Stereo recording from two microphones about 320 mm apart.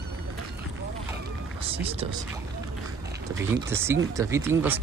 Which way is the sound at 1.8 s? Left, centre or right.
Centre.